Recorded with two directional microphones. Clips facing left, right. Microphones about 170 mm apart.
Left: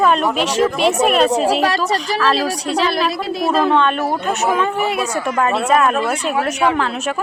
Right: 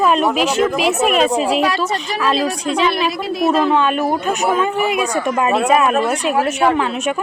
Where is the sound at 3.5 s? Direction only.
5° right (ahead or behind).